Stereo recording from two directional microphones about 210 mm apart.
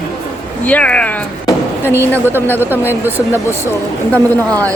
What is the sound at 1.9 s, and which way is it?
Speech, 10° right (ahead or behind).